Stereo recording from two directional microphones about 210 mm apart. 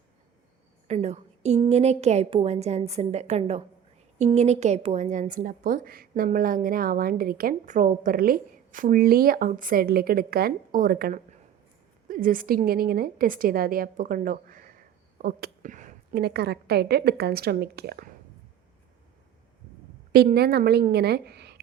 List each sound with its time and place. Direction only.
0.9 s a woman's voice: 30° right (ahead or behind); by 18.1 s 50° right (ahead or behind)
20.1 s a woman's voice: 50° right (ahead or behind)